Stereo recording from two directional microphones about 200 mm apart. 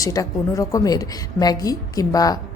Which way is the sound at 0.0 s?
15° left (ahead or behind).